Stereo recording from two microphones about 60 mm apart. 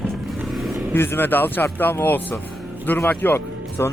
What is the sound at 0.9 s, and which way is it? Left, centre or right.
Speech, left.